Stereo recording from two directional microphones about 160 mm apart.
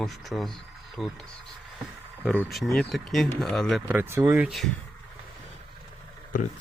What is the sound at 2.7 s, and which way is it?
Speech, centre (ahead or behind).